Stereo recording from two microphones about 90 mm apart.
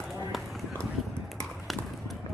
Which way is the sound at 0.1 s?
Centre (ahead or behind).